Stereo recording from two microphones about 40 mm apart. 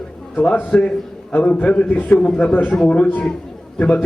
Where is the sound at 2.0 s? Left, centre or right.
Left.